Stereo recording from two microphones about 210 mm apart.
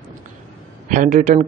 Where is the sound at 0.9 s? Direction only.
40° right (ahead or behind).